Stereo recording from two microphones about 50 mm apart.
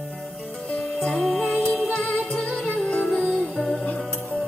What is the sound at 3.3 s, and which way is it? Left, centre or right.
Music, centre.